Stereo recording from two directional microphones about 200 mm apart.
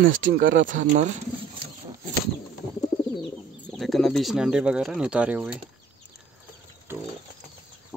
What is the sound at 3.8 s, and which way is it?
Speech, centre (ahead or behind).